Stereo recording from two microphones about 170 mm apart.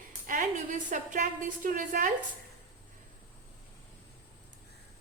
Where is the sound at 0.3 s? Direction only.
50° right (ahead or behind).